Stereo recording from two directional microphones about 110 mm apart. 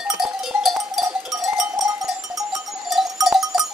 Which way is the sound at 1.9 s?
30° right (ahead or behind).